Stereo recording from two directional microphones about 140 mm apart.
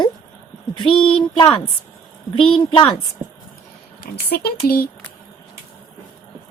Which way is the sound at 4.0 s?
90° left.